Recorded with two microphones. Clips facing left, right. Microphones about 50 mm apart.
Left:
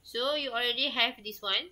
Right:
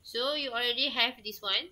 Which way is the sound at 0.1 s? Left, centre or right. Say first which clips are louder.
Left 1 dB; centre.